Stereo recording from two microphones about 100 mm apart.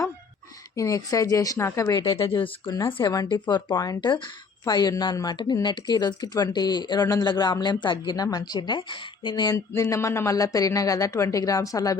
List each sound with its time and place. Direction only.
0.8 s a woman's voice: 35° left (ahead or behind)
1.9 s speech: 40° left (ahead or behind)
2.1 s speech: 60° left (ahead or behind)
2.6 s a woman's voice: 40° left (ahead or behind)
3.2 s a woman's voice: 45° left (ahead or behind)